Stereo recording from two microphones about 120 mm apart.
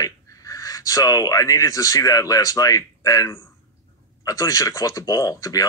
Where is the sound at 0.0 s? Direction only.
30° left (ahead or behind).